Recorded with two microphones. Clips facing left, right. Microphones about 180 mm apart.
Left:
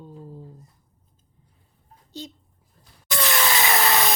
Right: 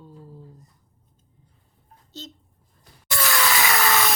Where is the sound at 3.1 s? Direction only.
20° left (ahead or behind).